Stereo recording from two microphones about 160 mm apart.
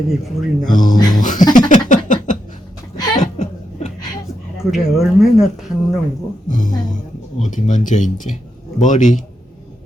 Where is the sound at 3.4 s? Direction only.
45° left (ahead or behind).